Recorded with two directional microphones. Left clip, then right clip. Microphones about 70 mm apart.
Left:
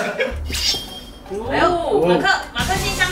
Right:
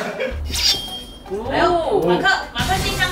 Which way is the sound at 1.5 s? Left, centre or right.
Centre.